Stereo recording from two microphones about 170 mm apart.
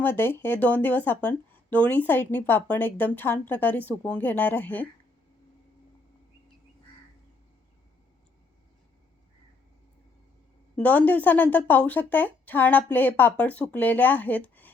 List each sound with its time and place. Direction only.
0.0 s speech: 10° left (ahead or behind)
10.8 s speech: 10° left (ahead or behind)